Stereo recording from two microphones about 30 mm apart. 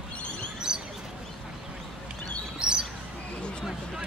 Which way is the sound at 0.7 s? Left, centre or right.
Right.